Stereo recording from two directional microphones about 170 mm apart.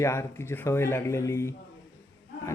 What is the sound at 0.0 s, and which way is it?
Speech, 15° left (ahead or behind).